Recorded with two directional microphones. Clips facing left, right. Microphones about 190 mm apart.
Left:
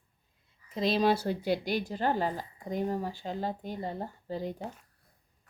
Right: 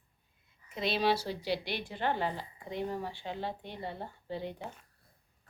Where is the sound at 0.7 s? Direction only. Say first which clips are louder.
Left 4 dB; 40° left (ahead or behind).